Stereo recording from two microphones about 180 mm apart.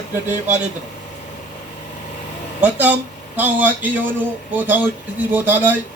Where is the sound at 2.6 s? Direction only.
10° right (ahead or behind).